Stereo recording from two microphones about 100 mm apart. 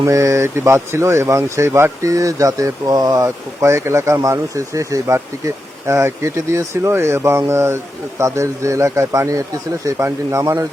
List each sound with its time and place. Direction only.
0.0 s speech: 30° right (ahead or behind)